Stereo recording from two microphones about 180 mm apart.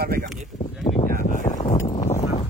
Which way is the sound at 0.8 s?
35° left (ahead or behind).